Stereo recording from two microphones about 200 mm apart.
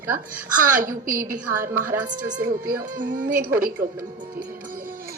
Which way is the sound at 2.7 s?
45° right (ahead or behind).